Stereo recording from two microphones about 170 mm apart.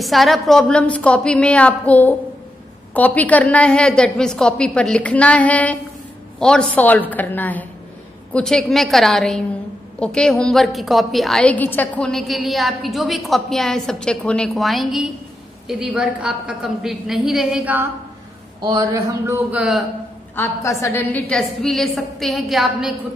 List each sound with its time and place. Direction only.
0.0 s a woman's voice: centre (ahead or behind)
18.6 s a man's voice: 25° right (ahead or behind)
19.2 s a man's voice: 15° right (ahead or behind)
20.3 s a woman's voice: 15° left (ahead or behind); by 22.9 s centre (ahead or behind)